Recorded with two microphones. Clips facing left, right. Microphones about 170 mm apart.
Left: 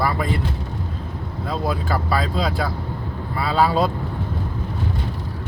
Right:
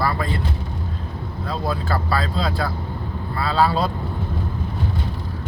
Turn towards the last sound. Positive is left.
turn(degrees=15)  # may be behind; listen again after turning